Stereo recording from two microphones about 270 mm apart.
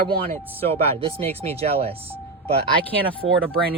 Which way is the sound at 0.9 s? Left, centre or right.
Right.